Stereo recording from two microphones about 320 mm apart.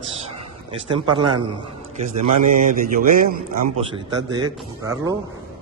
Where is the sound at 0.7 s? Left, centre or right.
Centre.